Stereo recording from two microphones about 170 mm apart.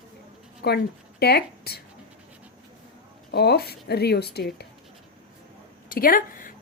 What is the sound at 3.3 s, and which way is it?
A woman's voice, 70° left (ahead or behind).